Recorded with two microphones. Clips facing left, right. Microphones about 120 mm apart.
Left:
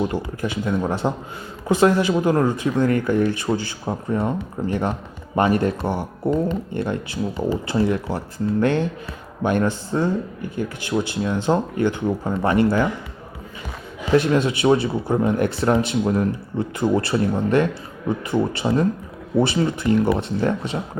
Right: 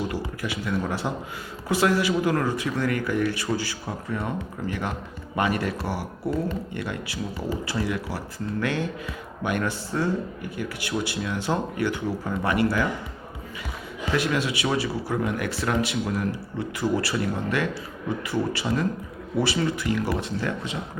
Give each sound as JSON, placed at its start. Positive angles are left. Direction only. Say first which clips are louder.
{"t": 0.1, "sound": "speech", "louder": "left 5 dB", "side_deg": 25}
{"t": 14.1, "sound": "speech", "louder": "left 7 dB", "side_deg": 30}